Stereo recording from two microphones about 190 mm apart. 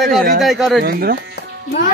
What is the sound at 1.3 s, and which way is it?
Music, 55° left (ahead or behind).